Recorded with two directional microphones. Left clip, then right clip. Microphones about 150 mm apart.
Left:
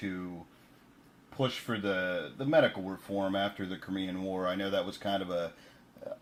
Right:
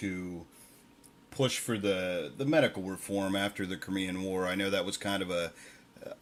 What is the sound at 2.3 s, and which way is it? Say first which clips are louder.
Speech: left 1 dB; 40° right (ahead or behind).